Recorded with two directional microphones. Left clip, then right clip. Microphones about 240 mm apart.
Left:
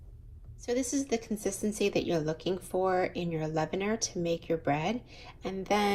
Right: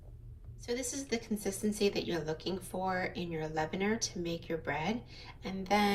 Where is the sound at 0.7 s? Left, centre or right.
Centre.